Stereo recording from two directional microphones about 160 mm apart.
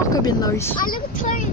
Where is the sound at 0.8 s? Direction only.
60° left (ahead or behind).